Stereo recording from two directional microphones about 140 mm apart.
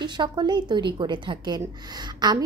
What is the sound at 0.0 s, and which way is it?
A woman's voice, 30° right (ahead or behind).